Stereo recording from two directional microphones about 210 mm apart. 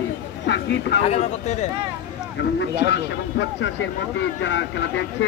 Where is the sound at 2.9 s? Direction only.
60° left (ahead or behind).